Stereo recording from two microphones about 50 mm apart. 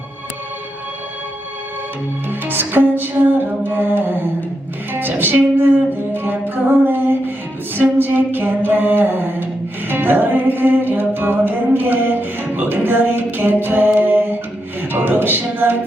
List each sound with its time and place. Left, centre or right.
2.4 s music: right